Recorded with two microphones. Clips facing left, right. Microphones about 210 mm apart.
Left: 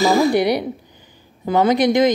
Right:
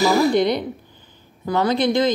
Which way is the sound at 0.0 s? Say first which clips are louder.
Left 1 dB; 15° left (ahead or behind).